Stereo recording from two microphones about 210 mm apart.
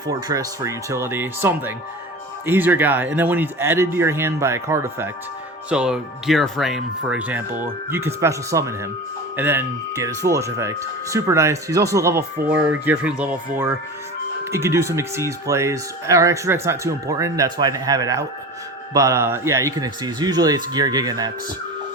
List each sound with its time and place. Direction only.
0.1 s speech: 15° right (ahead or behind)